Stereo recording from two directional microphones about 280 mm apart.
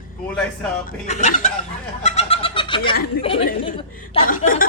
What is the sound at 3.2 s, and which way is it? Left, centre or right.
A man's voice, centre.